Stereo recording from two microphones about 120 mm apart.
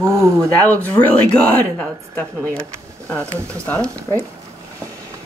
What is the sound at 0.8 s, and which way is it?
Speech, 15° left (ahead or behind).